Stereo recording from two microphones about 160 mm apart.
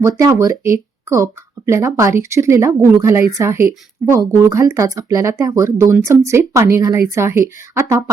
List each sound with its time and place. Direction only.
0.0 s speech: 20° right (ahead or behind)